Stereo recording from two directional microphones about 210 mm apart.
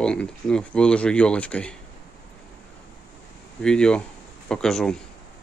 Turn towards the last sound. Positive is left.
turn(degrees=0)  # may be behind; listen again after turning